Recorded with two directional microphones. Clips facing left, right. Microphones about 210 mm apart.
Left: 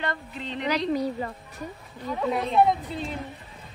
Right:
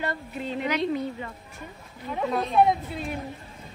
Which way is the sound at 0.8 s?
35° left (ahead or behind).